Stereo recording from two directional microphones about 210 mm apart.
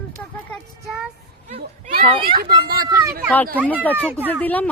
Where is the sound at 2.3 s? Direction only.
45° right (ahead or behind).